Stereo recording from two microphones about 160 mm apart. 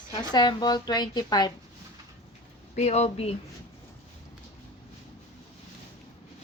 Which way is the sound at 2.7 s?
40° left (ahead or behind).